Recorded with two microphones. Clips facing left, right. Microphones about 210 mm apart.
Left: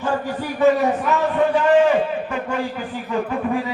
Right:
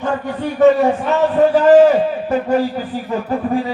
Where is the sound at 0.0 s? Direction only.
30° right (ahead or behind).